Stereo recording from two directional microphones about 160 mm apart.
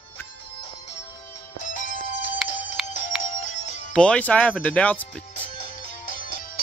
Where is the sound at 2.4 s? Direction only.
5° right (ahead or behind).